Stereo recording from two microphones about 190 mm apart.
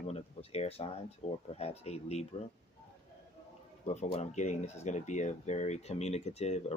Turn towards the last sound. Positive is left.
turn(degrees=35)  # may be behind; listen again after turning